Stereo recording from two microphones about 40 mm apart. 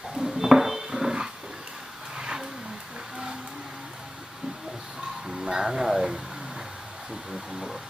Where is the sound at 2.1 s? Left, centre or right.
Centre.